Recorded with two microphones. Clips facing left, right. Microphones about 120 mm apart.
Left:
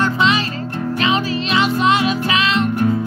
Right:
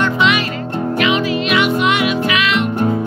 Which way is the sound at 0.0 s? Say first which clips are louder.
Right 1 dB; 35° left (ahead or behind).